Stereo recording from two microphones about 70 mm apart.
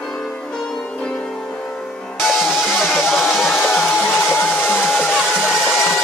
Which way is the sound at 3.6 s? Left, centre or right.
Centre.